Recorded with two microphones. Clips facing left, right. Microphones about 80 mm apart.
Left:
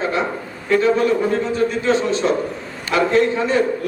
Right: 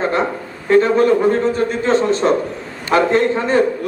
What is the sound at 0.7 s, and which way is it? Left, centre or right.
A man's voice, right.